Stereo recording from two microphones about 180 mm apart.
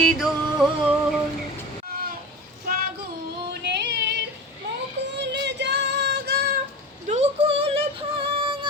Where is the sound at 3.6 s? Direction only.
70° right (ahead or behind).